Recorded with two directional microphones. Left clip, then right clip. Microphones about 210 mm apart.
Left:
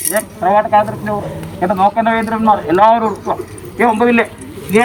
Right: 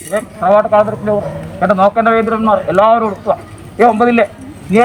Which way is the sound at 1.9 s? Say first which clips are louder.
Right 3 dB; 5° right (ahead or behind).